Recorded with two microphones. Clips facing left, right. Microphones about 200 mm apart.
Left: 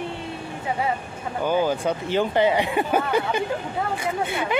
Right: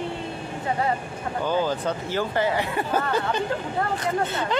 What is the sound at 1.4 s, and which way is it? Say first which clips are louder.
Speech: left 3 dB; 15° left (ahead or behind).